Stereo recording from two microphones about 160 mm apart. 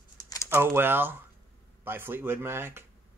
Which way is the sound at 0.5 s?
15° right (ahead or behind).